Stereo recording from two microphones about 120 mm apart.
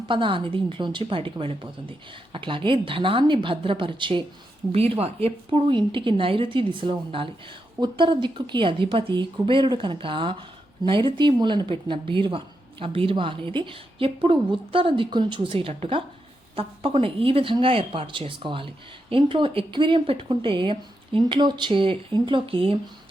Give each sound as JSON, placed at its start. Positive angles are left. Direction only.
{"t": 0.1, "sound": "a woman's voice", "side_deg": -45}
{"t": 4.7, "sound": "a woman's voice", "side_deg": -55}